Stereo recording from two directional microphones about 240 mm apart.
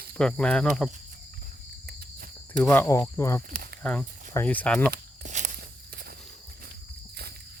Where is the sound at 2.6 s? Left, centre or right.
Centre.